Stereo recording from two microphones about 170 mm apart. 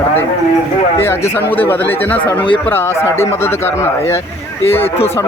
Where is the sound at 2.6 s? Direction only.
15° left (ahead or behind).